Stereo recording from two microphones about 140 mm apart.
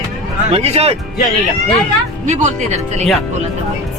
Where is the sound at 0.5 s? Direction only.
45° right (ahead or behind).